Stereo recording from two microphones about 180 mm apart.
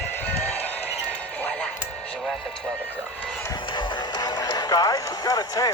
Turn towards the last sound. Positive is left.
turn(degrees=20)  # may be behind; listen again after turning